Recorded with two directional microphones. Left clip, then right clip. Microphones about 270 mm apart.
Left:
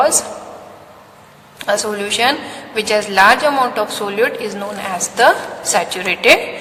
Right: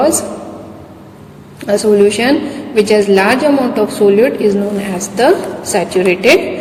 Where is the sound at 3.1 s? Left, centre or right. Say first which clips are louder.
Right 1 dB; centre.